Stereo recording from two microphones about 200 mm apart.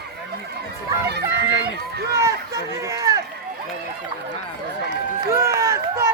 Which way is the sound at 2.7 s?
15° right (ahead or behind).